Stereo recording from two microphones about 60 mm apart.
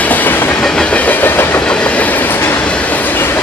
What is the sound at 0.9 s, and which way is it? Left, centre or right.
Train, left.